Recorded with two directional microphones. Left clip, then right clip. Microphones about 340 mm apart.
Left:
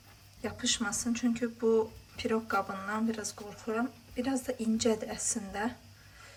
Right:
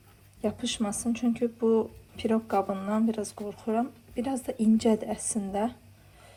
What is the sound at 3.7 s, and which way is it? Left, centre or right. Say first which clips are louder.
A woman's voice: right 4 dB; centre.